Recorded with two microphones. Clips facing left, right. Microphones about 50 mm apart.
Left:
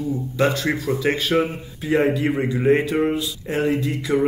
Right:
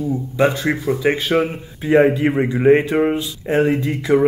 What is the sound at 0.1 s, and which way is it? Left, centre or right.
Speech, centre.